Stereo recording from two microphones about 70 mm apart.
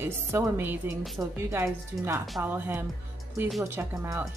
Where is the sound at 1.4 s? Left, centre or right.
Right.